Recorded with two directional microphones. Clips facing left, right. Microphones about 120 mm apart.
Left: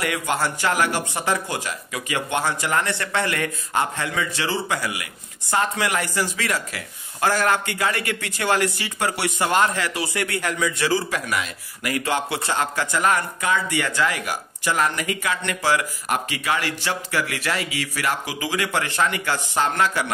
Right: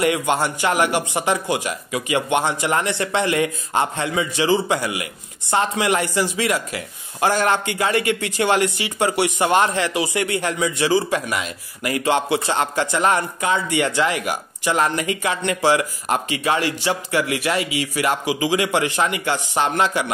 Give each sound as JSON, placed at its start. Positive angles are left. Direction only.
{"t": 0.0, "sound": "speech", "side_deg": -25}